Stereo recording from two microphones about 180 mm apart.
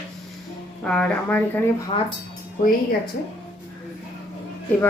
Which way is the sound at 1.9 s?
30° left (ahead or behind).